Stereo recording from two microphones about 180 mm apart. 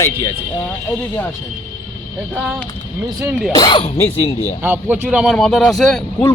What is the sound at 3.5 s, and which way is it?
Speech, 25° left (ahead or behind).